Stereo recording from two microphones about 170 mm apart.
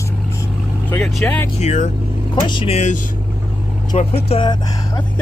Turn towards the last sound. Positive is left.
turn(degrees=30)  # may be behind; listen again after turning